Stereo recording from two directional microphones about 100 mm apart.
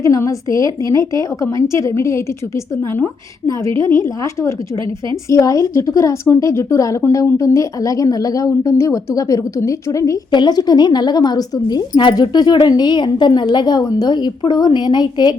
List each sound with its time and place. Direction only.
0.0 s a woman's voice: 35° left (ahead or behind)
3.4 s a woman's voice: 30° left (ahead or behind)
10.3 s a woman's voice: 45° left (ahead or behind)